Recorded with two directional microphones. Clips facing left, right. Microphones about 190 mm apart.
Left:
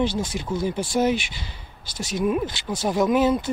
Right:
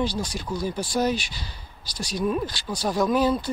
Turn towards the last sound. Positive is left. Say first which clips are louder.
# left 2 dB
turn(degrees=20)  # may be behind; listen again after turning